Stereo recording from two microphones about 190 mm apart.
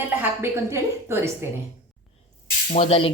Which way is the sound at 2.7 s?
30° left (ahead or behind).